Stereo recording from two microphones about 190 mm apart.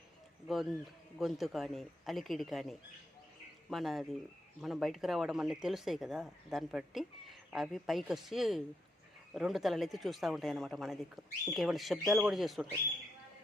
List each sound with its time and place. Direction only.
0.4 s a man's voice: centre (ahead or behind)